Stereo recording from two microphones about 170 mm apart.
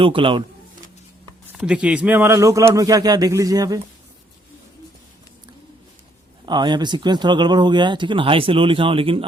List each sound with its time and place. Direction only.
0.0 s a man's voice: 30° right (ahead or behind)
1.5 s speech: 5° right (ahead or behind); by 3.8 s 20° right (ahead or behind)
6.4 s speech: 25° right (ahead or behind)